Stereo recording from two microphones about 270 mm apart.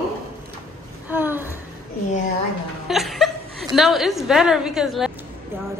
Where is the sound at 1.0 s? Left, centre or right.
Centre.